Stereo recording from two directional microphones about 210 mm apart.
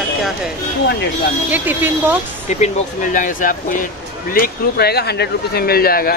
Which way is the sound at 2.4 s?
35° left (ahead or behind).